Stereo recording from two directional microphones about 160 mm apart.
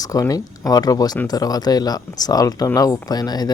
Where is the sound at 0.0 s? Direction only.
20° left (ahead or behind).